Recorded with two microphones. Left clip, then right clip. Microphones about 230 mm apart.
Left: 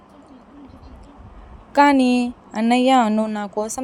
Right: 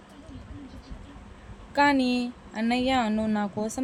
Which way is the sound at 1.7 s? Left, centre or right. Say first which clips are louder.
Left 8 dB; left.